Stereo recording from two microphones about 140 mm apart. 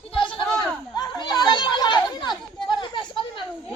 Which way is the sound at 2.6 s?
35° left (ahead or behind).